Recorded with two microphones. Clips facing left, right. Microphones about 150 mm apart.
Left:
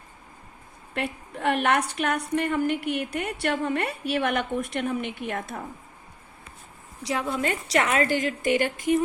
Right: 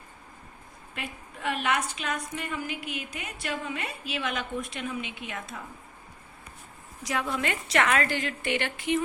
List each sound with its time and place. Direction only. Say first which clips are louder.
0.9 s a woman's voice: left 9 dB; 65° left (ahead or behind)
7.0 s a woman's voice: left 3 dB; 25° left (ahead or behind)
7.9 s a woman's voice: left 2 dB; 20° left (ahead or behind)
8.1 s speech: left 6 dB; 40° left (ahead or behind)